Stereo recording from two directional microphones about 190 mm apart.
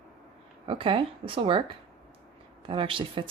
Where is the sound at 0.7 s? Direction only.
30° right (ahead or behind).